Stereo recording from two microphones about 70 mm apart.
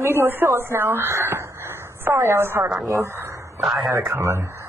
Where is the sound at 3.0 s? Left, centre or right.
Right.